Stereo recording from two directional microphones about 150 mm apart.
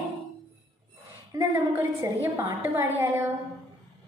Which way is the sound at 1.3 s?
15° right (ahead or behind).